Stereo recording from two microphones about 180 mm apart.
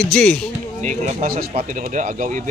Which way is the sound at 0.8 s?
40° right (ahead or behind).